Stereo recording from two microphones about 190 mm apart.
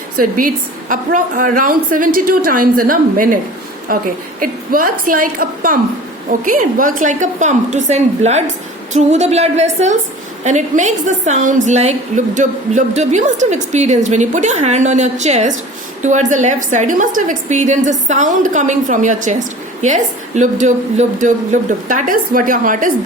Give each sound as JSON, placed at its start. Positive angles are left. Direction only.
{"t": 0.2, "sound": "a woman's voice", "side_deg": -45}